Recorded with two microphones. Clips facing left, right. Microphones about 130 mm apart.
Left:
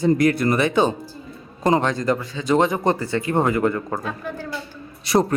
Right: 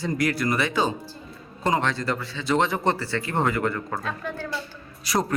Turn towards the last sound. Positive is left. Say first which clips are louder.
# left 6 dB
turn(degrees=25)  # may be behind; listen again after turning